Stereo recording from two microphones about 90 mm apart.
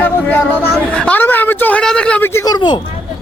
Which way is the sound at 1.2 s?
20° left (ahead or behind).